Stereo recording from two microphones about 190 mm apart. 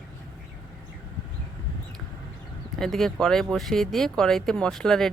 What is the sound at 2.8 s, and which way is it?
Speech, centre (ahead or behind).